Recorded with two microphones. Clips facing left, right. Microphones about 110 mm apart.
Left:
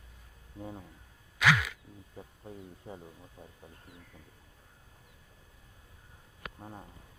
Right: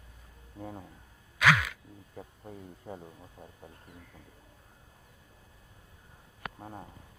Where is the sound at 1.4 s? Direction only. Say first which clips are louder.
Right 2 dB; 55° right (ahead or behind).